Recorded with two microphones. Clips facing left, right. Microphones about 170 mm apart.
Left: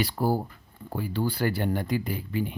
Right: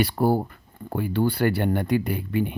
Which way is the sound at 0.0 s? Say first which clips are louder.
Right 5 dB; 60° right (ahead or behind).